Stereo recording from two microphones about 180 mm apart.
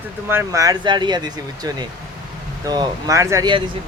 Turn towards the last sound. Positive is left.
turn(degrees=-20)  # may be behind; listen again after turning